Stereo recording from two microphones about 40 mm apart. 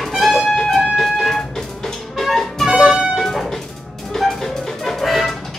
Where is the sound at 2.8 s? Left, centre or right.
Centre.